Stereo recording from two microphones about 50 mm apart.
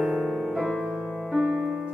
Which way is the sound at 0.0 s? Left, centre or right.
Centre.